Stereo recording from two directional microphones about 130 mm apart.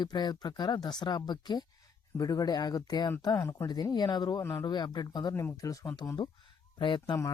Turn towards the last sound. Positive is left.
turn(degrees=40)  # may be behind; listen again after turning